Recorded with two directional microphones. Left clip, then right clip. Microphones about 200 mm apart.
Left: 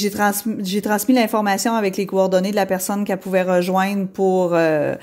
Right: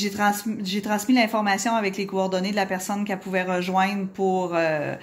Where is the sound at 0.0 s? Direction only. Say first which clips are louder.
Left 4 dB; 70° left (ahead or behind).